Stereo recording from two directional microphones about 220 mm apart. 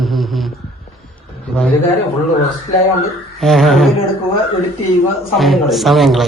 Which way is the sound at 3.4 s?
Centre (ahead or behind).